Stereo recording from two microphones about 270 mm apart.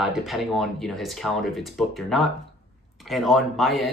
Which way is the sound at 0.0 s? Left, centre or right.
Centre.